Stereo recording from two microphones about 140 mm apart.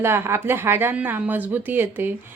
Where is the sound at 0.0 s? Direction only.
15° right (ahead or behind).